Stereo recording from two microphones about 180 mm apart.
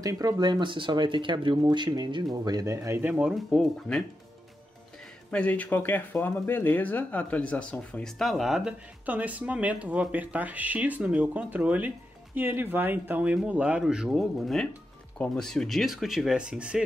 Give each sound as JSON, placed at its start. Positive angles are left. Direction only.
{"t": 0.0, "sound": "speech", "side_deg": -20}
{"t": 5.3, "sound": "speech", "side_deg": 5}